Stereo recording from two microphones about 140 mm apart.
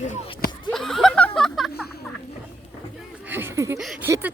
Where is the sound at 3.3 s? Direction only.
15° right (ahead or behind).